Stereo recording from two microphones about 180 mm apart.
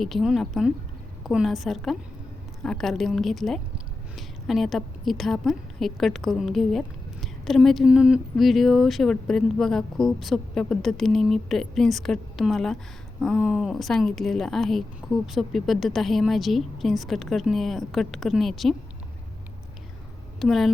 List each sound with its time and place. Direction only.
0.0 s a woman's voice: centre (ahead or behind)
20.4 s a woman's voice: centre (ahead or behind)